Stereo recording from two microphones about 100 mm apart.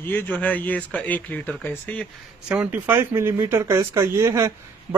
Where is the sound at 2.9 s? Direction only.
25° right (ahead or behind).